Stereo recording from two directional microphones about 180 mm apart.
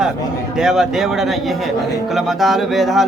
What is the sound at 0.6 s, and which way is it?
Speech, 5° right (ahead or behind).